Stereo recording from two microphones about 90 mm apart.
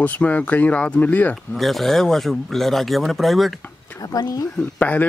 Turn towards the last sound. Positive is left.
turn(degrees=15)  # may be behind; listen again after turning